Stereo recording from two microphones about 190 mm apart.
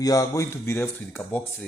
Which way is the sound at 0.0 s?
20° left (ahead or behind).